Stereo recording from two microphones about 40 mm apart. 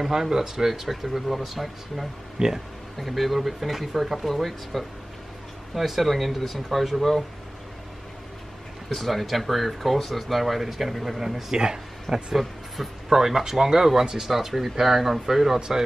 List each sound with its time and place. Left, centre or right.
0.0 s speech: centre
3.0 s speech: centre
8.8 s speech: centre
12.4 s speech: centre